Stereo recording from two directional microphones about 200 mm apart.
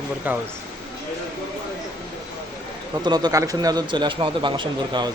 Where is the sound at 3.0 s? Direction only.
20° right (ahead or behind).